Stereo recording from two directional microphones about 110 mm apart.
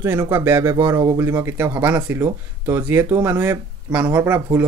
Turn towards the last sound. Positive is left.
turn(degrees=-20)  # may be behind; listen again after turning